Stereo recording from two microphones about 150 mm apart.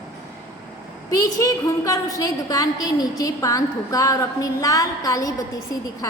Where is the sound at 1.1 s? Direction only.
25° left (ahead or behind).